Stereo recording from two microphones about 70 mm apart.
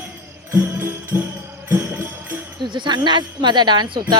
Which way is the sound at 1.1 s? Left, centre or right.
Right.